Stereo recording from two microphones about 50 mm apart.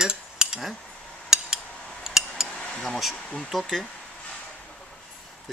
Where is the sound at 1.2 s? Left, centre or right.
Centre.